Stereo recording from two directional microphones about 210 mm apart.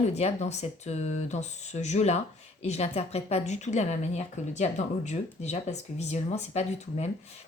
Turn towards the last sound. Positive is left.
turn(degrees=30)  # may be behind; listen again after turning